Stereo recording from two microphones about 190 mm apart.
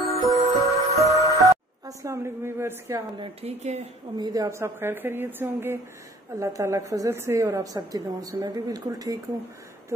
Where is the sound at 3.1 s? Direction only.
35° right (ahead or behind).